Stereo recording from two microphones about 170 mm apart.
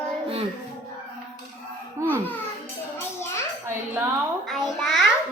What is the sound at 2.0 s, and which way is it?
Speech, 15° right (ahead or behind).